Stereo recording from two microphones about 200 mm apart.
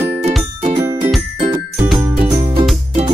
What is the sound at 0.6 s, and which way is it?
Music, 30° right (ahead or behind).